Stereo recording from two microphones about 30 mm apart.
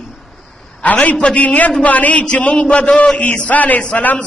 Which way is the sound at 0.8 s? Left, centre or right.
Left.